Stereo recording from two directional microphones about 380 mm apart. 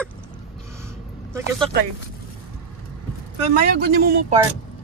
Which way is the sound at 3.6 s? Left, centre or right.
Right.